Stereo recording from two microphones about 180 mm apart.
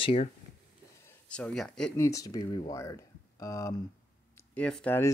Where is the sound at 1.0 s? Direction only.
5° left (ahead or behind).